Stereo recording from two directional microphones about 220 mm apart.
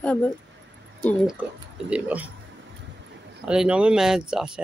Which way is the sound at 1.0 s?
5° left (ahead or behind).